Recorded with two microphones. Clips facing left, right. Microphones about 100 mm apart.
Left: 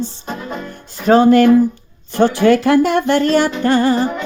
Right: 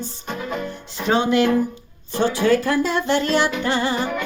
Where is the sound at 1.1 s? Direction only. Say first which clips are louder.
Left 8 dB; 45° left (ahead or behind).